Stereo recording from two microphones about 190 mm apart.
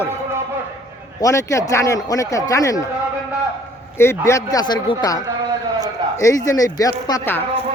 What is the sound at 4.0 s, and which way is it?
Speech, 15° left (ahead or behind).